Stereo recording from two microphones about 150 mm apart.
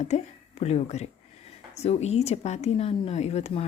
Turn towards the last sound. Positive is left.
turn(degrees=45)  # may be behind; listen again after turning